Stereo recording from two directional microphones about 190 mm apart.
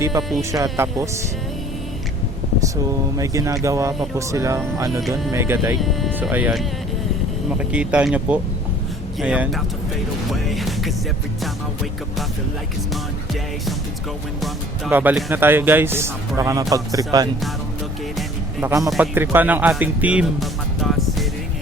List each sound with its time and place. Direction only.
0.2 s speech: centre (ahead or behind)
0.5 s speech: 15° right (ahead or behind)
3.2 s speech: 15° right (ahead or behind)
5.8 s speech: centre (ahead or behind)
10.2 s music: centre (ahead or behind)
14.8 s speech: 10° right (ahead or behind)
18.6 s speech: 15° right (ahead or behind); by 21.2 s centre (ahead or behind)